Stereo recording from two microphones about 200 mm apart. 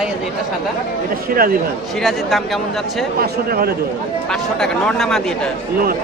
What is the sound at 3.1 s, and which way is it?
Speech, 50° right (ahead or behind).